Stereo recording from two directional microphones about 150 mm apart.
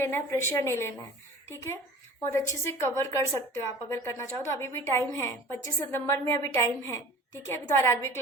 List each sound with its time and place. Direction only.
0.0 s a woman's voice: 15° left (ahead or behind)